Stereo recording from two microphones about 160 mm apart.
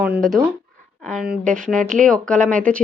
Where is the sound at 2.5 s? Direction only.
5° left (ahead or behind).